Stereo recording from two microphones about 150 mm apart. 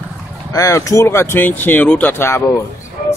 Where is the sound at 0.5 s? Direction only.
20° left (ahead or behind).